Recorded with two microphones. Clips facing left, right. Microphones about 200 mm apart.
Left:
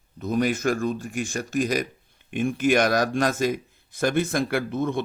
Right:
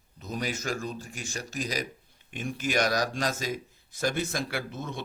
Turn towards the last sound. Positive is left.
turn(degrees=55)  # may be behind; listen again after turning